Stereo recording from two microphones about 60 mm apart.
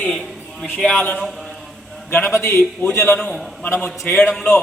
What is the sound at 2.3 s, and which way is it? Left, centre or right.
Speech, left.